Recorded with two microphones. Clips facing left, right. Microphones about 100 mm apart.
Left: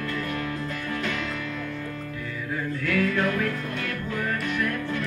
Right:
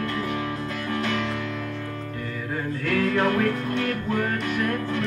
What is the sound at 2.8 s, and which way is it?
Music, 40° right (ahead or behind).